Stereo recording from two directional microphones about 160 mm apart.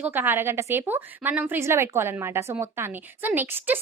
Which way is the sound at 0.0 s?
10° right (ahead or behind).